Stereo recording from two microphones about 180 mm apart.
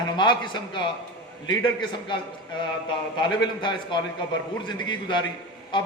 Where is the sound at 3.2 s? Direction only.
25° left (ahead or behind).